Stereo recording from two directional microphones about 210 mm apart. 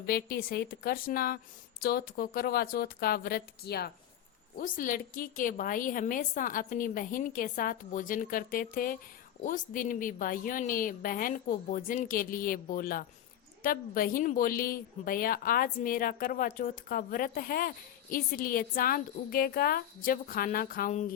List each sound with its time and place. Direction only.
0.0 s a woman's voice: 45° left (ahead or behind)